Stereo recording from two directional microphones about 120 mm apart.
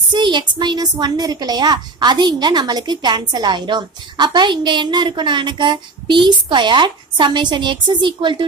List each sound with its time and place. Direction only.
0.1 s a woman's voice: 40° right (ahead or behind)